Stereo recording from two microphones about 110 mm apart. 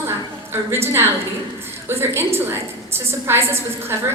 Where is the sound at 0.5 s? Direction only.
20° right (ahead or behind).